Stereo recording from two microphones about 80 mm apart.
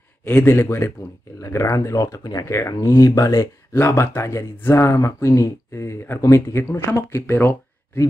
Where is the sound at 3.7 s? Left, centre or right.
Left.